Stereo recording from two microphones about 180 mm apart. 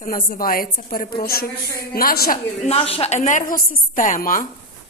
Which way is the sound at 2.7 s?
35° left (ahead or behind).